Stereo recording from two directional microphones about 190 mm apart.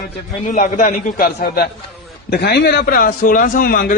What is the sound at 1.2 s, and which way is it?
A man's voice, 55° left (ahead or behind).